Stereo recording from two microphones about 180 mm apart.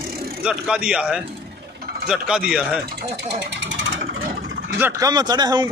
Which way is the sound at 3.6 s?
90° right.